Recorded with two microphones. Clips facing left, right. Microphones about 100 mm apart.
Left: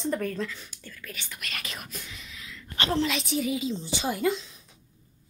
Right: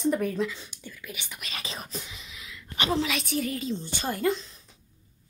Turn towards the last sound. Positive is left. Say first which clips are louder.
# even
turn(degrees=5)  # may be behind; listen again after turning